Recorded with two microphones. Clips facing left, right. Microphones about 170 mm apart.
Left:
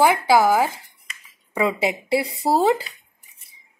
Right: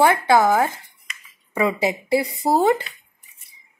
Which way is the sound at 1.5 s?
15° left (ahead or behind).